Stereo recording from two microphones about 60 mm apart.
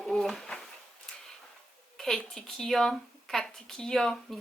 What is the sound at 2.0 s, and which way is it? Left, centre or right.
A woman's voice, centre.